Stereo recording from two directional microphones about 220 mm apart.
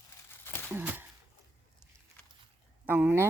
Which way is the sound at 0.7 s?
10° right (ahead or behind).